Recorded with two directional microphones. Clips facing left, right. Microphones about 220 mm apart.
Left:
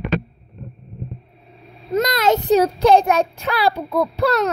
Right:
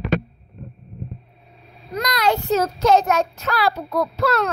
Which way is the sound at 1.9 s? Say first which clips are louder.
Left 4 dB; 25° left (ahead or behind).